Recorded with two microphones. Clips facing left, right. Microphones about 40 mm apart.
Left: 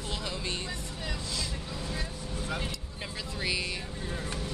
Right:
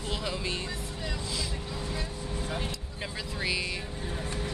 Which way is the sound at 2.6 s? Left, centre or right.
Centre.